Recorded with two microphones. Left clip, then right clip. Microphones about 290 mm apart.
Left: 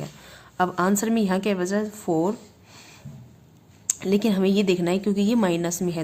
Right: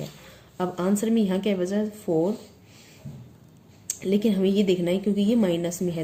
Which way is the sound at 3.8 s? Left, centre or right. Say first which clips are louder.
Left 1 dB; left.